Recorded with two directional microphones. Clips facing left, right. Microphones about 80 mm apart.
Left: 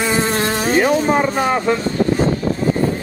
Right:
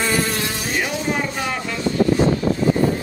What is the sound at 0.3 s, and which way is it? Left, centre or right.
Insect, left.